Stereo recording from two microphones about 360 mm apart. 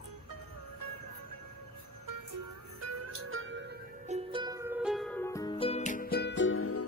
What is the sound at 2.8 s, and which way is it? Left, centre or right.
Music, right.